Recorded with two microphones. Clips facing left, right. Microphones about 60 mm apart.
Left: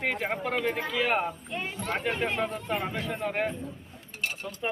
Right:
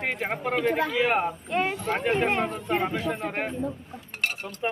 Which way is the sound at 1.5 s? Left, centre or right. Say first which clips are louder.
Right 12 dB; right.